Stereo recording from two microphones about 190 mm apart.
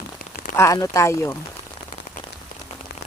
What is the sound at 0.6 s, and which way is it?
Speech, 15° left (ahead or behind).